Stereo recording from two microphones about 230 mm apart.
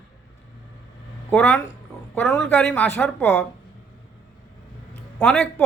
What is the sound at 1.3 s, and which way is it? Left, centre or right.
A man's voice, centre.